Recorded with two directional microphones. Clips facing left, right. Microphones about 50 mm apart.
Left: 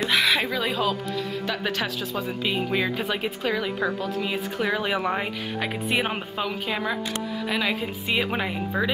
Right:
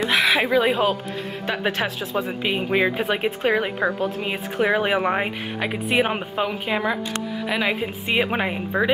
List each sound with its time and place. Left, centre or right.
0.1 s a woman's voice: centre
5.6 s a woman's voice: centre